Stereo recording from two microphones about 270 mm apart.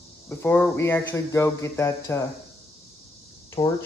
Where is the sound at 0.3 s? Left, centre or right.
Centre.